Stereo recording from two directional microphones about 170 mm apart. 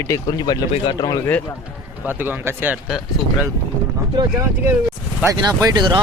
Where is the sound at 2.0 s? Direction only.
10° right (ahead or behind).